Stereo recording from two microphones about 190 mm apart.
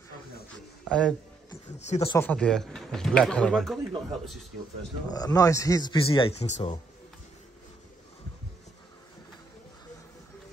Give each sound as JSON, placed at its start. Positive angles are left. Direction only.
{"t": 0.5, "sound": "a sound", "side_deg": 5}
{"t": 1.9, "sound": "speech", "side_deg": 35}
{"t": 2.1, "sound": "speech", "side_deg": 5}
{"t": 5.1, "sound": "speech", "side_deg": 20}